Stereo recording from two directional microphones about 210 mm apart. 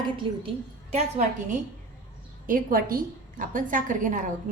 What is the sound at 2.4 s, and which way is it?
A woman's voice, 40° right (ahead or behind).